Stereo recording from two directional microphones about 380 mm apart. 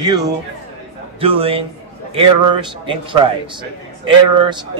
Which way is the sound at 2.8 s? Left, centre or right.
Centre.